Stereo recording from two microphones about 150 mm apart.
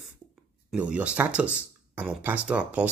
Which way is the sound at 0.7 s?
10° right (ahead or behind).